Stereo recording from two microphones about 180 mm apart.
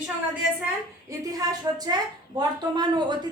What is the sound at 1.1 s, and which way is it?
A woman's voice, 20° right (ahead or behind).